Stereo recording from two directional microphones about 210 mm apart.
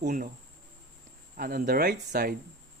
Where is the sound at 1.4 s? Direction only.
45° right (ahead or behind).